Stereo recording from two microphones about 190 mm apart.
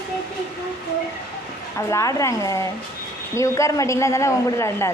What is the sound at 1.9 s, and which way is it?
A man's voice, 15° left (ahead or behind).